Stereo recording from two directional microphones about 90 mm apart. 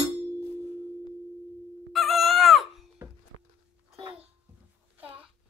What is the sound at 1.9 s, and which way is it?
Chicken, centre (ahead or behind).